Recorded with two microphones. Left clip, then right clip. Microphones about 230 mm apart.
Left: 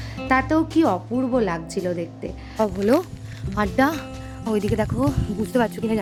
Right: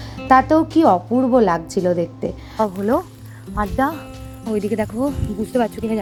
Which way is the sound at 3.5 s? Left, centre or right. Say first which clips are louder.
Even; left.